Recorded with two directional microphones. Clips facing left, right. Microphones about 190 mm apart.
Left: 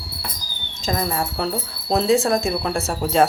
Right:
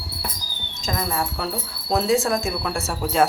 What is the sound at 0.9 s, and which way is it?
Speech, 30° left (ahead or behind).